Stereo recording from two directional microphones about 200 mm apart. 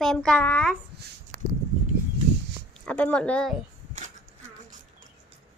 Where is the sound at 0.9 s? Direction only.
55° right (ahead or behind).